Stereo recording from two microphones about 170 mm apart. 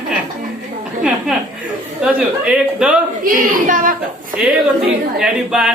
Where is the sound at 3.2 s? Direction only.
55° right (ahead or behind).